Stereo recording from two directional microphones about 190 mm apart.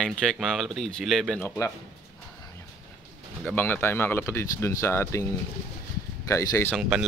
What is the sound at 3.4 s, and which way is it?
Speech, 10° left (ahead or behind).